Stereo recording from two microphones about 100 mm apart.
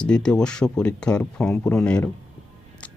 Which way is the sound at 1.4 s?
25° left (ahead or behind).